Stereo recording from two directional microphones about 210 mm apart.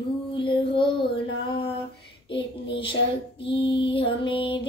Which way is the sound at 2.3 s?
25° left (ahead or behind).